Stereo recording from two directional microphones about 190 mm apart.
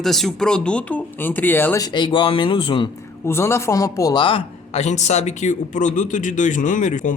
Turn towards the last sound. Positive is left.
turn(degrees=40)  # may be behind; listen again after turning